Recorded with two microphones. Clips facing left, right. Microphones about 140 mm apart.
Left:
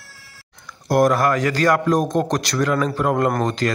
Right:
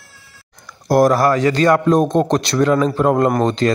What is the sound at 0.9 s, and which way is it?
Speech, 35° right (ahead or behind).